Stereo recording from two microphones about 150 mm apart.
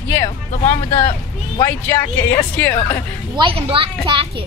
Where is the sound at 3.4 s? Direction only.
35° right (ahead or behind).